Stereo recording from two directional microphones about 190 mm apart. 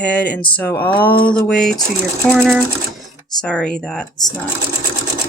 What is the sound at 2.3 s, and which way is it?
Speech, 10° right (ahead or behind).